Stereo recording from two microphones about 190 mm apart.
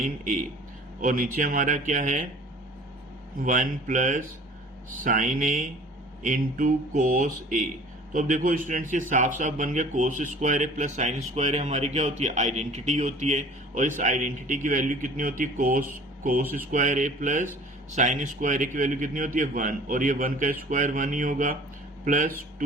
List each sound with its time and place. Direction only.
1.0 s a man's voice: 45° right (ahead or behind)
3.4 s a man's voice: 45° right (ahead or behind)